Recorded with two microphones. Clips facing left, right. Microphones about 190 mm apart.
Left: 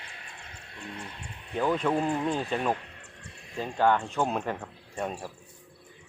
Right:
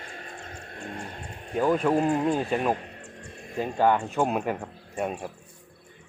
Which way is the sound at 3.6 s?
15° right (ahead or behind).